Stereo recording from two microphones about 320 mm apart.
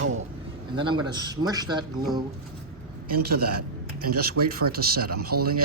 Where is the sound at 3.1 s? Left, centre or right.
Right.